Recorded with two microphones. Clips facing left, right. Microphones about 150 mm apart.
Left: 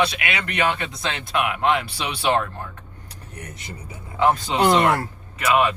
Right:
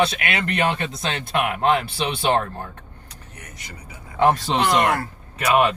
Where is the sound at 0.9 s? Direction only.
25° right (ahead or behind).